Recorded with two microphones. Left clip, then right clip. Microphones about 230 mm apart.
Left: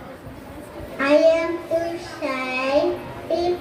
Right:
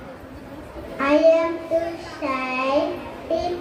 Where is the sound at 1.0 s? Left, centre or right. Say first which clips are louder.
Even; left.